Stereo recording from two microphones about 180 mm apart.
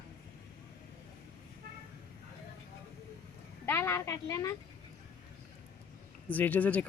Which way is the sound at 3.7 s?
15° left (ahead or behind).